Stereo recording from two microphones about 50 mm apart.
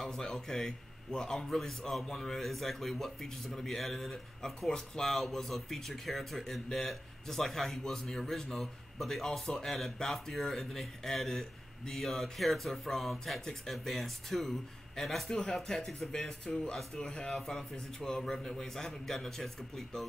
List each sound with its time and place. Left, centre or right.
0.0 s a man's voice: centre